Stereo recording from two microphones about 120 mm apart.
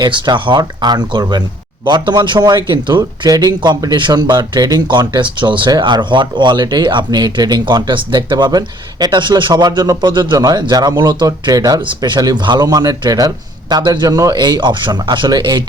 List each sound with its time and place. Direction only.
0.0 s a man's voice: 40° right (ahead or behind)